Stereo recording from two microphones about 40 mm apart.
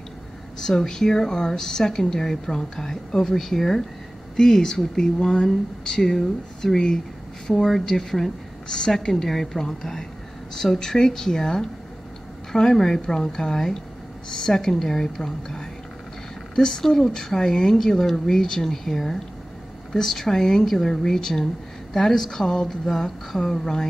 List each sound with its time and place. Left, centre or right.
0.6 s a woman's voice: centre